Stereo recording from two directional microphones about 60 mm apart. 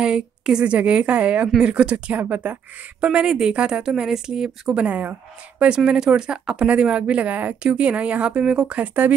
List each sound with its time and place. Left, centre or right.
0.0 s speech: centre
4.8 s speech: right
5.9 s speech: centre